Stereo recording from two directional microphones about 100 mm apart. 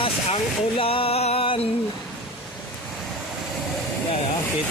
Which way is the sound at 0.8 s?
70° left (ahead or behind).